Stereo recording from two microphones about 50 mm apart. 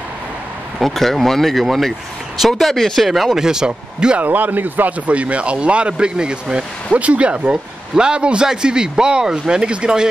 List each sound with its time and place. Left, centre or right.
0.7 s speech: centre
3.1 s speech: centre
4.2 s speech: right; by 10.0 s centre